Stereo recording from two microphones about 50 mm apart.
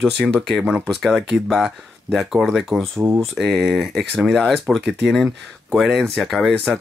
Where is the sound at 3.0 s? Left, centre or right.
Right.